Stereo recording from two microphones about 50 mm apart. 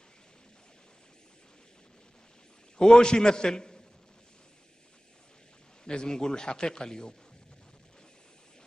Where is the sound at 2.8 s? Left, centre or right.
Centre.